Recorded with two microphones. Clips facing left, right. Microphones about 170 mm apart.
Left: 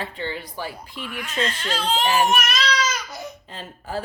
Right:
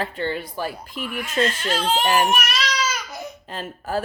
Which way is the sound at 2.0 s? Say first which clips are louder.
Even; 50° right (ahead or behind).